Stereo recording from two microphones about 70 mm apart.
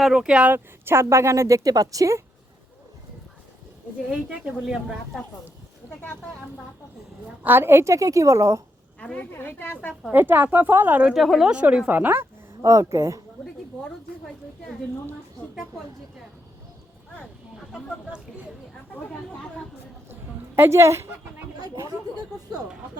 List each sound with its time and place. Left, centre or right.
0.0 s speech: centre
0.5 s speech: right
4.1 s speech: centre
7.4 s speech: right
9.0 s a woman's voice: centre
9.3 s a woman's voice: left
10.1 s speech: right
11.1 s speech: centre
11.5 s speech: centre
11.9 s speech: right
20.6 s a woman's voice: right
21.6 s speech: right